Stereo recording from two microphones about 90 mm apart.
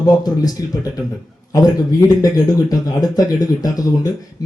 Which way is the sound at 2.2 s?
45° left (ahead or behind).